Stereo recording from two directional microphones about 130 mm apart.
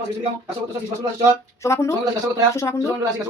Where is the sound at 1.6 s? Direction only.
20° left (ahead or behind).